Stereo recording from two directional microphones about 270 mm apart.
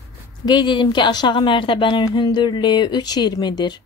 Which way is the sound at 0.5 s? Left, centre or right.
Centre.